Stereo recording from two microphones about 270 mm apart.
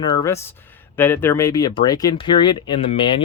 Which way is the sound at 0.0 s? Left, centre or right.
Centre.